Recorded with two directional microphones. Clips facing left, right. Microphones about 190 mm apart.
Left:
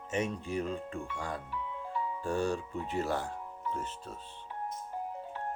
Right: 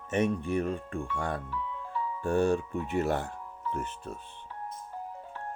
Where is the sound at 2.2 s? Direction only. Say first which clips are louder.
Right 7 dB; 55° right (ahead or behind).